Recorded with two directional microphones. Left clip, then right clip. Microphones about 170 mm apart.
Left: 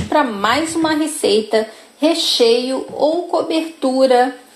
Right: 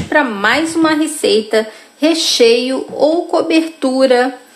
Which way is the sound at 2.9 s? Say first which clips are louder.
Right 4 dB; 25° right (ahead or behind).